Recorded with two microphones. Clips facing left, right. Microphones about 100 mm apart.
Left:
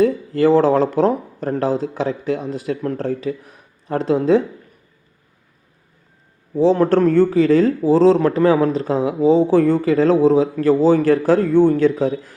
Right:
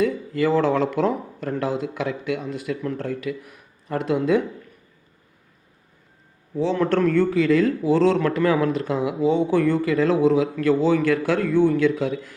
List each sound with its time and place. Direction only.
0.0 s a man's voice: 35° left (ahead or behind)
6.5 s a man's voice: 35° left (ahead or behind)